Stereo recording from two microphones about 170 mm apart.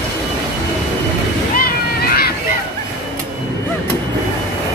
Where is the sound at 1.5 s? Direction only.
60° left (ahead or behind).